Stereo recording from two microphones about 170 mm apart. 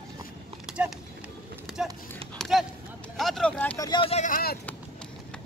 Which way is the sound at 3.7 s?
20° left (ahead or behind).